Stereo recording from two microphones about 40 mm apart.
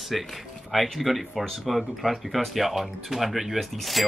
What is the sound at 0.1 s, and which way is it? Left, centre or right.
Speech, centre.